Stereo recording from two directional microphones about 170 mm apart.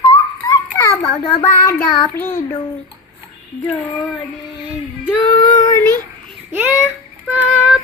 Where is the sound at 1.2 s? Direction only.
30° left (ahead or behind).